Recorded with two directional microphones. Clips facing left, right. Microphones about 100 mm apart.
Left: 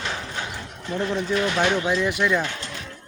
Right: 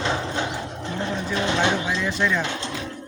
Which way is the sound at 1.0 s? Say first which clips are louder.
Left 3 dB; 25° right (ahead or behind).